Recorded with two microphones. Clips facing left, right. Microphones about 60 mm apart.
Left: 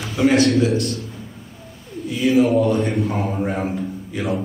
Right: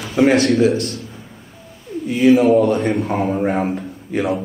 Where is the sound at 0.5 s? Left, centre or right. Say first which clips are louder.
Right 2 dB; right.